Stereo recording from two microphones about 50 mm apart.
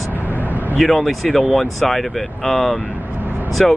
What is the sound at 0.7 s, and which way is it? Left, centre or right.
Speech, centre.